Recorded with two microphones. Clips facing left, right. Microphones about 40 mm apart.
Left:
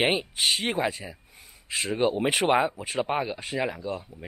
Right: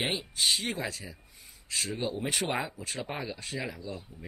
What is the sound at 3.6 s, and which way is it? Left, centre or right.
Speech, left.